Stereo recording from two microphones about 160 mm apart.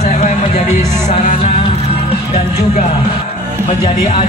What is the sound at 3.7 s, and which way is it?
Speech, 40° left (ahead or behind).